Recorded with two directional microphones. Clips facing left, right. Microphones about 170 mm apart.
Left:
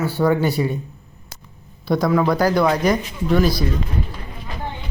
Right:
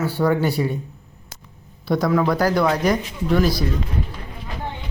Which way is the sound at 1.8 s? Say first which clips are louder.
Left 1 dB; 20° left (ahead or behind).